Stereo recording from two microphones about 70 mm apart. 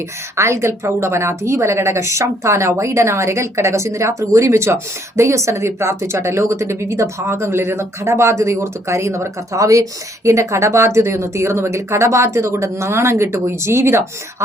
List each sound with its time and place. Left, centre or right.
0.3 s a woman's voice: right